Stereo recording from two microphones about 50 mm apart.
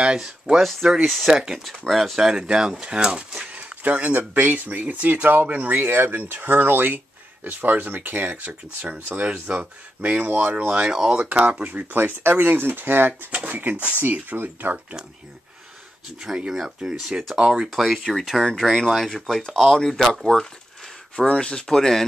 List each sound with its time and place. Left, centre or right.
0.0 s speech: centre
0.6 s speech: centre
0.8 s speech: centre
1.6 s speech: centre; by 5.8 s right
5.8 s speech: right
8.8 s speech: right
10.9 s speech: centre
11.2 s speech: right
13.3 s speech: right
16.4 s speech: centre
17.6 s speech: centre